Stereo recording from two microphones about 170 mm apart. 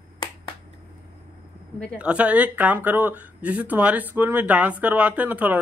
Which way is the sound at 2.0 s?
5° right (ahead or behind).